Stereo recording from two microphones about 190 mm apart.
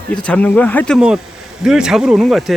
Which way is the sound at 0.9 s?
5° right (ahead or behind).